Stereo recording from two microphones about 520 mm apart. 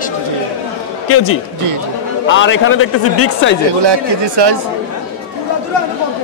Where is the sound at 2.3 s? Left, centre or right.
Left.